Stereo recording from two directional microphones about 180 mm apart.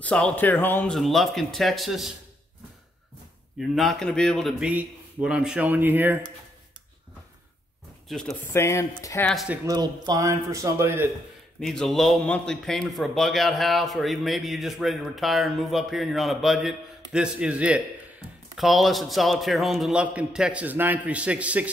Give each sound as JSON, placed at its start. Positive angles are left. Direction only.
{"t": 0.0, "sound": "a man's voice", "side_deg": 5}
{"t": 3.5, "sound": "a man's voice", "side_deg": 0}
{"t": 8.1, "sound": "a man's voice", "side_deg": 0}
{"t": 8.5, "sound": "speech", "side_deg": 15}
{"t": 9.3, "sound": "a man's voice", "side_deg": 0}
{"t": 9.7, "sound": "a man's voice", "side_deg": -20}
{"t": 11.6, "sound": "a man's voice", "side_deg": 5}